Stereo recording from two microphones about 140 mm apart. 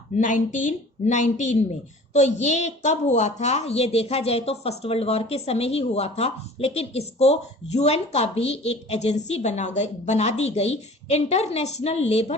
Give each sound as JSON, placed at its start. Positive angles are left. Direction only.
{"t": 0.2, "sound": "a woman's voice", "side_deg": 65}